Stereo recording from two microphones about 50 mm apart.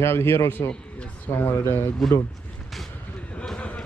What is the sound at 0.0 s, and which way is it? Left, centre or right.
A man's voice, left.